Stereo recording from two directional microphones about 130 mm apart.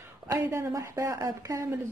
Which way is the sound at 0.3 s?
20° right (ahead or behind).